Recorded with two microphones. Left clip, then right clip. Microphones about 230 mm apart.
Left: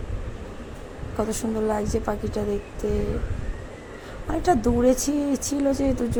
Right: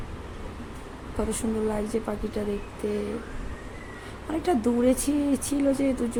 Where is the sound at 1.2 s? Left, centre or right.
Centre.